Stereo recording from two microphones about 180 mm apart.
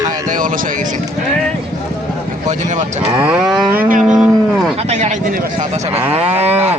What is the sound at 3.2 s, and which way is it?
Moo, 10° right (ahead or behind).